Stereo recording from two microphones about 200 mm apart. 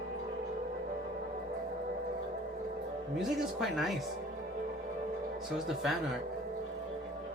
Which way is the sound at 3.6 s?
Centre (ahead or behind).